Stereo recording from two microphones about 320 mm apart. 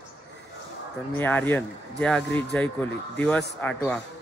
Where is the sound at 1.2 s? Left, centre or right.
Centre.